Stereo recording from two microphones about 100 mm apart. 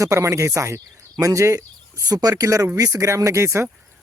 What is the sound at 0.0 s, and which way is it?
Speech, 30° right (ahead or behind).